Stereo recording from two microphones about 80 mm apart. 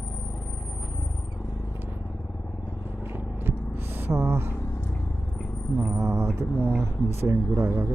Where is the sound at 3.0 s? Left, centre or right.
Right.